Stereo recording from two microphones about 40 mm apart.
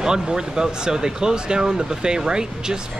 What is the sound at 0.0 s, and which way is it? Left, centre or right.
Speech, centre.